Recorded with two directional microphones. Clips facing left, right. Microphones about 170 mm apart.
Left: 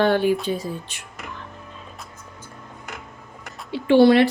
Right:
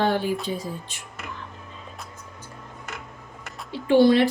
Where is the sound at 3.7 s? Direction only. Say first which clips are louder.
Left 3 dB; 75° left (ahead or behind).